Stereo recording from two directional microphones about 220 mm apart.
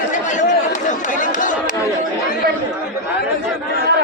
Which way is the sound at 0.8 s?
35° left (ahead or behind).